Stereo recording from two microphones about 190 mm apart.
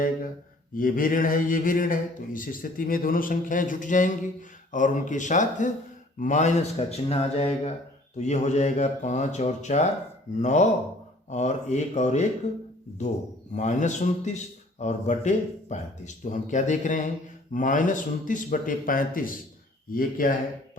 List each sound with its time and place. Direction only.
0.7 s a man's voice: 45° left (ahead or behind)
13.5 s a man's voice: 40° left (ahead or behind)